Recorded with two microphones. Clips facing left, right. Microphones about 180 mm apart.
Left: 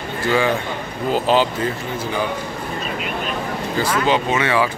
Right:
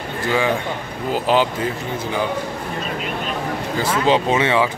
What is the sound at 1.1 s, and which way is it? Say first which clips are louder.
Speech: left 1 dB; 15° right (ahead or behind).